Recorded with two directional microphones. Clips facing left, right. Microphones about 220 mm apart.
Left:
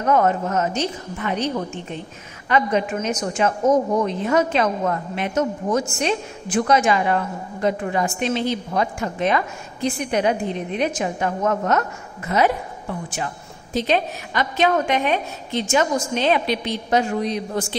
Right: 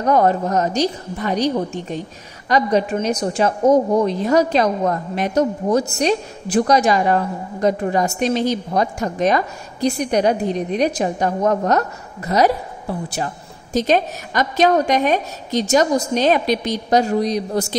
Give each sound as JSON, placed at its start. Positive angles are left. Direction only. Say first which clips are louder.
{"t": 0.0, "sound": "a woman's voice", "louder": "right 3 dB", "side_deg": -35}